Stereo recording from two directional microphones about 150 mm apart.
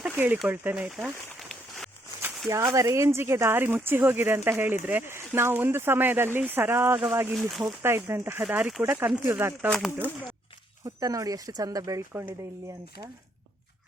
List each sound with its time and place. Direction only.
0.4 s speech: 10° right (ahead or behind)
1.4 s a sound: centre (ahead or behind)
2.5 s speech: 20° right (ahead or behind)
7.3 s speech: centre (ahead or behind)
7.6 s speech: 15° right (ahead or behind)
9.6 s speech: 5° left (ahead or behind)
10.8 s speech: 20° right (ahead or behind)